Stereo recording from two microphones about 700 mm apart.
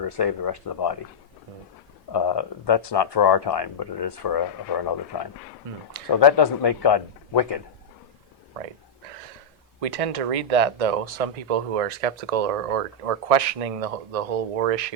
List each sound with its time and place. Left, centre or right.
0.0 s speech: left
2.1 s speech: left
9.8 s speech: right